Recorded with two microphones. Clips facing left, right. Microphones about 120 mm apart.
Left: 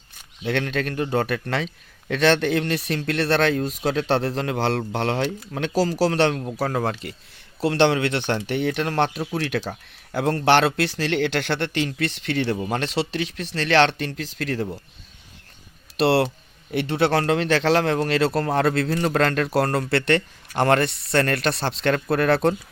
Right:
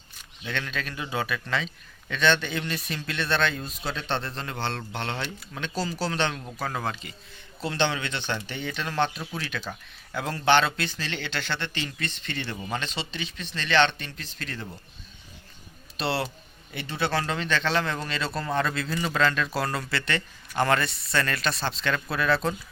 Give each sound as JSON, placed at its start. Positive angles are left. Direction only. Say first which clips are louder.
{"t": 0.4, "sound": "a man's voice", "louder": "left 9 dB", "side_deg": 65}
{"t": 6.7, "sound": "a man's voice", "louder": "left 4 dB", "side_deg": 65}
{"t": 16.0, "sound": "a man's voice", "louder": "left 10 dB", "side_deg": 75}